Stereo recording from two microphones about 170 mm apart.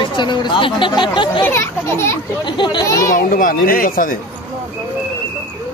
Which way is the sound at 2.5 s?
30° left (ahead or behind).